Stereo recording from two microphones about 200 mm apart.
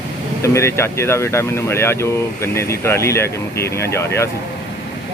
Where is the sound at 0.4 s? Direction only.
15° left (ahead or behind).